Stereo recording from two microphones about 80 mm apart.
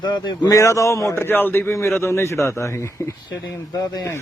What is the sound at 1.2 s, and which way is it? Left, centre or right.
A man's voice, left.